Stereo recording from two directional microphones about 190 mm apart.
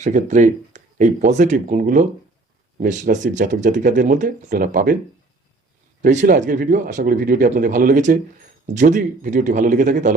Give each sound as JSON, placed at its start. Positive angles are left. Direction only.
{"t": 0.0, "sound": "speech", "side_deg": -40}
{"t": 6.0, "sound": "speech", "side_deg": -40}